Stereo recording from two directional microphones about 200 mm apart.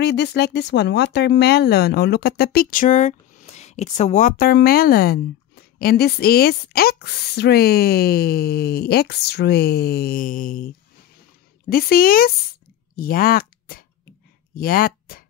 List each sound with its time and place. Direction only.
0.0 s speech: 55° left (ahead or behind)
11.7 s speech: 45° left (ahead or behind)